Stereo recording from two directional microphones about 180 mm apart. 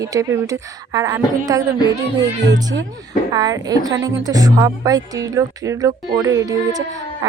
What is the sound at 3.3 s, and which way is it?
Speech, 20° right (ahead or behind).